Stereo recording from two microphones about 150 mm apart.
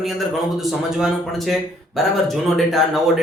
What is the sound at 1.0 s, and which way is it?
Speech, centre (ahead or behind).